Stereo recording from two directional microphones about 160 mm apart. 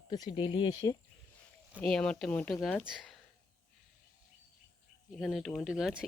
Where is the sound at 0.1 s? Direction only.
30° left (ahead or behind).